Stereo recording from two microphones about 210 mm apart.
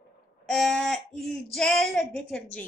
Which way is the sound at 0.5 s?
Centre (ahead or behind).